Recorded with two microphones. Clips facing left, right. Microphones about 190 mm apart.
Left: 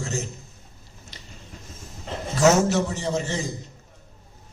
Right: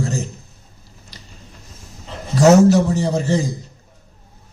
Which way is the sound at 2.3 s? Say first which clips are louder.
Right 8 dB; 35° right (ahead or behind).